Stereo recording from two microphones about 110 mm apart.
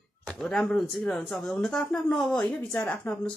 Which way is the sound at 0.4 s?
5° left (ahead or behind).